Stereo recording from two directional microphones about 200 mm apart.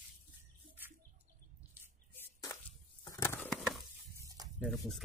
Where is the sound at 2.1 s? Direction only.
10° left (ahead or behind).